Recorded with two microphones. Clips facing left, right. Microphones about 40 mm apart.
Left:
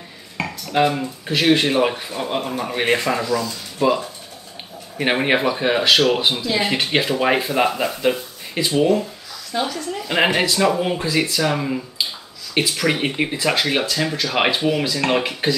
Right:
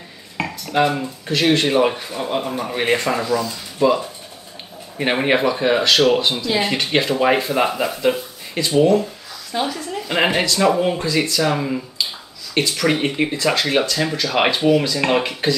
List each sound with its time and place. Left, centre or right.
0.4 s dishes: centre
0.7 s speech: centre
9.5 s speech: centre